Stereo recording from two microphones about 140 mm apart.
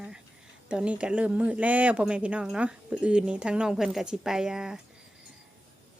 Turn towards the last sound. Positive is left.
turn(degrees=-5)  # may be behind; listen again after turning